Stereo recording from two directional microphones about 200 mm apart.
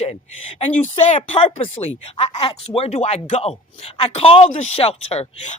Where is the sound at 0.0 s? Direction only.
30° left (ahead or behind).